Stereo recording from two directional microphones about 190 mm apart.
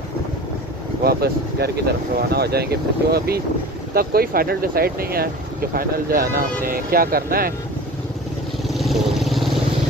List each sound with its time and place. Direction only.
1.0 s speech: 55° right (ahead or behind)
8.6 s vehicle: centre (ahead or behind)